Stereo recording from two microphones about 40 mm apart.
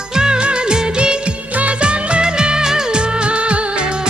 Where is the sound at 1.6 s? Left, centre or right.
Right.